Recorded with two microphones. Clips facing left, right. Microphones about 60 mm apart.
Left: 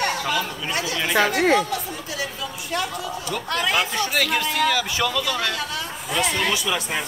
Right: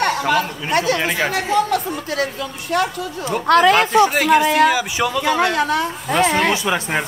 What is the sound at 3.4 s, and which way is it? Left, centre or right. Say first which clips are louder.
Speech: right 11 dB; right.